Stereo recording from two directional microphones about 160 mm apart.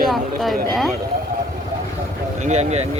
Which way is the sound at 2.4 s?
45° right (ahead or behind).